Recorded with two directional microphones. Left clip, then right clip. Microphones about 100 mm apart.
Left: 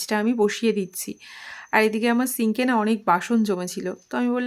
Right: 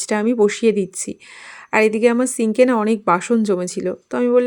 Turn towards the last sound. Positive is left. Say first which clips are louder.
# right 9 dB
turn(degrees=-35)  # may be behind; listen again after turning